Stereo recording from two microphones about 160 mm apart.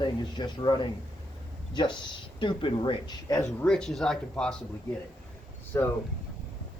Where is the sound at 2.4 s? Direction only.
30° left (ahead or behind).